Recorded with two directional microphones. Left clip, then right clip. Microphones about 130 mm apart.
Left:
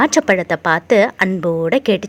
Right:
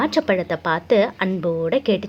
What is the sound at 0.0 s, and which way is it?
A woman's voice, 45° left (ahead or behind).